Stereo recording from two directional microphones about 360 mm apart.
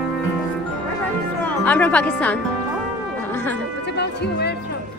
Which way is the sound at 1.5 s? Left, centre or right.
Centre.